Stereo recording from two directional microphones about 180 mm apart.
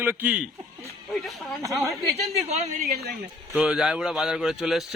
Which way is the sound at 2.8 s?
60° right (ahead or behind).